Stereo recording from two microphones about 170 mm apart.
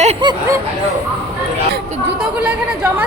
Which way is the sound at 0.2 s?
25° right (ahead or behind).